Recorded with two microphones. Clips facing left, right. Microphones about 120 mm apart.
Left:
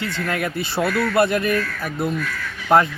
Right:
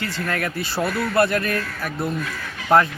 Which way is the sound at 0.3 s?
15° left (ahead or behind).